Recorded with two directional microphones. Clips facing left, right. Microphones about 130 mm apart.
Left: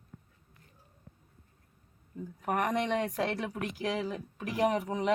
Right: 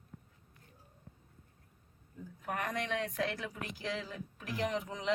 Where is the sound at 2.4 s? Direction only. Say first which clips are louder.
Left 7 dB; 70° left (ahead or behind).